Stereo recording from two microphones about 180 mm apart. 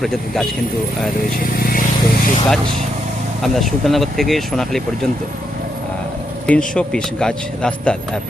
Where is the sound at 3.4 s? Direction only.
Centre (ahead or behind).